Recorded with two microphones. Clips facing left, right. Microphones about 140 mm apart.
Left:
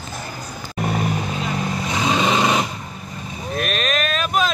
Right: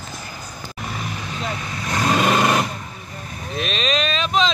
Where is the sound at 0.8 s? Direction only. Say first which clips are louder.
Left 9 dB; 55° left (ahead or behind).